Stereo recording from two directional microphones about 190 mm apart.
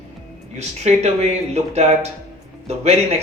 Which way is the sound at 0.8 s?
35° right (ahead or behind).